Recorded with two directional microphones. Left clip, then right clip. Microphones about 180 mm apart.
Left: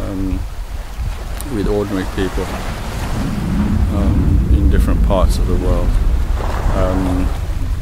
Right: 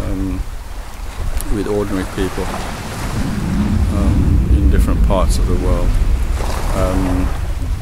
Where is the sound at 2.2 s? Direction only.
10° left (ahead or behind).